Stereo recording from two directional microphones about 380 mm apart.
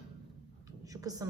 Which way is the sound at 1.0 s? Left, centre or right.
Centre.